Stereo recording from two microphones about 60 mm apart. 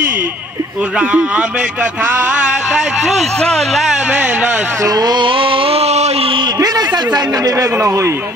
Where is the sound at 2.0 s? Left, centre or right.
Right.